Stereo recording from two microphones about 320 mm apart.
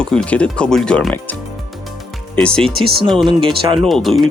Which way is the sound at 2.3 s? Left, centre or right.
Centre.